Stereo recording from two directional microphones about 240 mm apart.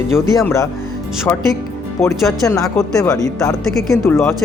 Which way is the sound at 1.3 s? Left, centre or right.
Centre.